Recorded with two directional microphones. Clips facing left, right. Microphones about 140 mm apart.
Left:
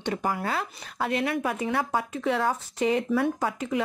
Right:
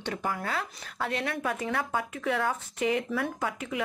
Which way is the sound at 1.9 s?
30° left (ahead or behind).